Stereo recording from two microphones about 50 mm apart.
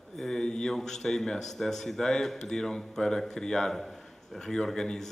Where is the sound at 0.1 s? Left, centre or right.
Centre.